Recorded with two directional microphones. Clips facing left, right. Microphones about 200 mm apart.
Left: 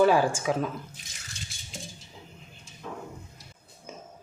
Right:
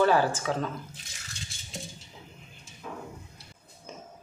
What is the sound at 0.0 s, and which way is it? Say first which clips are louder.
Speech: left 2 dB; 15° left (ahead or behind).